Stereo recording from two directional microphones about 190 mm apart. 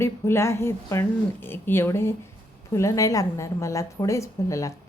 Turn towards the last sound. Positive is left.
turn(degrees=15)  # may be behind; listen again after turning